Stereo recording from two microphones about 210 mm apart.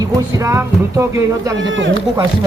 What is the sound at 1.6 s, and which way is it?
Speech, 65° right (ahead or behind).